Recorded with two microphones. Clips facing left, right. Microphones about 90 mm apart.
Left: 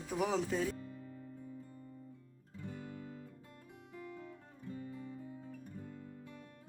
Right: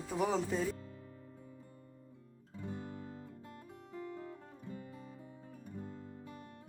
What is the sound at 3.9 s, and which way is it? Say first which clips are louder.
Music: right 4 dB; 30° right (ahead or behind).